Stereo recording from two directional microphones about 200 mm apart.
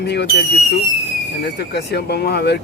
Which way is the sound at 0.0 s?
55° left (ahead or behind).